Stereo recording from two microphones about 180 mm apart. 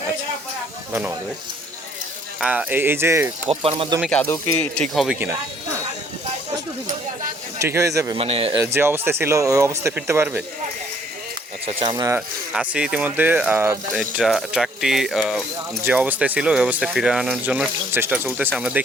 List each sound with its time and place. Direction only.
2.4 s speech: 5° right (ahead or behind)
3.5 s speech: 30° right (ahead or behind)
4.0 s speech: 5° left (ahead or behind)
4.9 s speech: 5° right (ahead or behind)
7.6 s speech: 15° right (ahead or behind)
8.2 s speech: 30° right (ahead or behind)
8.6 s speech: 15° right (ahead or behind)
11.6 s speech: 30° right (ahead or behind)
12.5 s speech: 5° right (ahead or behind)
15.8 s speech: 10° right (ahead or behind)